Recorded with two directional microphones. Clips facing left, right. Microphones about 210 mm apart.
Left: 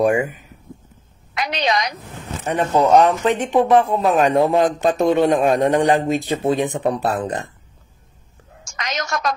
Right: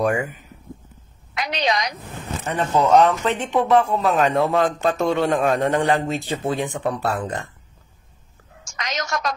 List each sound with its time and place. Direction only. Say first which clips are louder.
1.3 s a sound: left 2 dB; 60° left (ahead or behind)
2.5 s speech: left 2 dB; 15° left (ahead or behind)
8.7 s a woman's voice: left 1 dB; 55° left (ahead or behind)